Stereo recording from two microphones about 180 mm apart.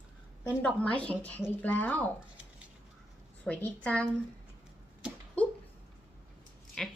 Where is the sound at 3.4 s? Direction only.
10° left (ahead or behind).